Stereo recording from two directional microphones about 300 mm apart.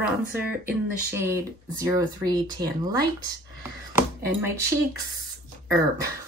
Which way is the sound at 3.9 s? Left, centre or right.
Centre.